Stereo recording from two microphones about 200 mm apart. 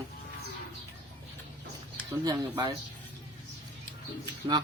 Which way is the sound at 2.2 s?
20° right (ahead or behind).